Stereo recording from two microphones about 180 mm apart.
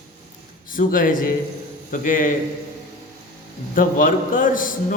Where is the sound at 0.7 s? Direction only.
50° left (ahead or behind).